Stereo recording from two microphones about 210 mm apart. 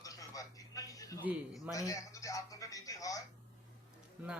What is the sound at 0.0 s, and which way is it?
Television, 15° left (ahead or behind).